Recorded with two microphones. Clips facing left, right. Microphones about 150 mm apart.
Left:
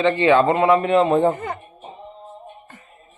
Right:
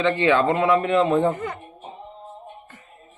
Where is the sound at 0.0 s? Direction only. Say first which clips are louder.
Left 3 dB; 35° left (ahead or behind).